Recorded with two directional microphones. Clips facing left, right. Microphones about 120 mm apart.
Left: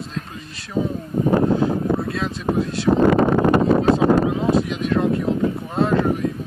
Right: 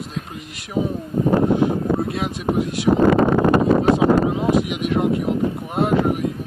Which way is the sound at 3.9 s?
15° right (ahead or behind).